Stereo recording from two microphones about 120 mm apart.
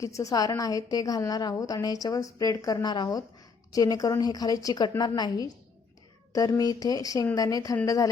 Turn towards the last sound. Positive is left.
turn(degrees=30)  # may be behind; listen again after turning